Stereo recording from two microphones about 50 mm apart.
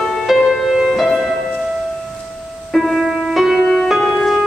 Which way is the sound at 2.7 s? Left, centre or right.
Centre.